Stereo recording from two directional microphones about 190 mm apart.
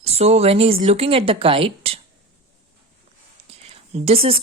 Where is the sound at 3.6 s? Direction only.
35° right (ahead or behind).